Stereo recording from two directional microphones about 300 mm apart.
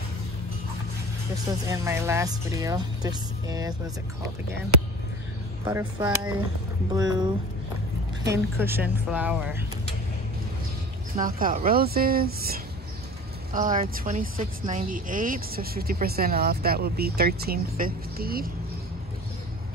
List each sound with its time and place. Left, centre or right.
1.7 s speech: centre
5.7 s speech: centre
11.1 s a woman's voice: right